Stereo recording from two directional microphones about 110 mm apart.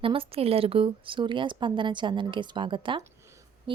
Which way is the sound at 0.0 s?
55° right (ahead or behind).